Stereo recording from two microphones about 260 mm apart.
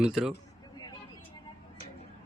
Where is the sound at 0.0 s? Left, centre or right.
Centre.